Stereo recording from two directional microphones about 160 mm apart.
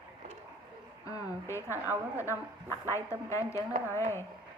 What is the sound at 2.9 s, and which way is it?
A woman's voice, 20° left (ahead or behind).